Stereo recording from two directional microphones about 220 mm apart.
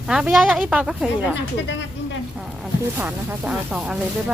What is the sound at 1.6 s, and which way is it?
Speech, 55° left (ahead or behind).